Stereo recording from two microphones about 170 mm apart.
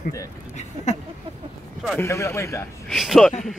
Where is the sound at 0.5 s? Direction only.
40° left (ahead or behind).